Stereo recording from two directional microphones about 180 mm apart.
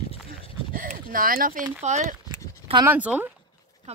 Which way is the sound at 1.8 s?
40° right (ahead or behind).